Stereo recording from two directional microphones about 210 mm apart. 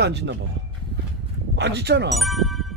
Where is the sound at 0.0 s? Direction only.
55° right (ahead or behind).